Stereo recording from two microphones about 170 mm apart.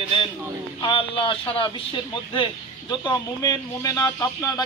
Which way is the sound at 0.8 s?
30° left (ahead or behind).